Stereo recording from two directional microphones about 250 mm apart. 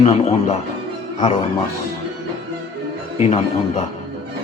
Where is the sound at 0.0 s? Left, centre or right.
Left.